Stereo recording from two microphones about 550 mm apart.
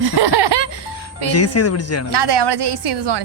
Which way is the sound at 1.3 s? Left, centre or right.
Left.